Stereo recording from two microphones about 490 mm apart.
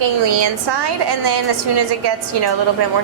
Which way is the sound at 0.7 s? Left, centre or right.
Right.